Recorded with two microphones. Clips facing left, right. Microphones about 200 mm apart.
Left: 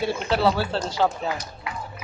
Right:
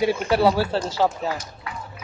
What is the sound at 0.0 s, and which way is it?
Speech, 15° right (ahead or behind).